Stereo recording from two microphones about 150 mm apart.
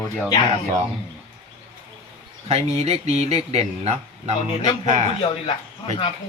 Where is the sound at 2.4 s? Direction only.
45° right (ahead or behind).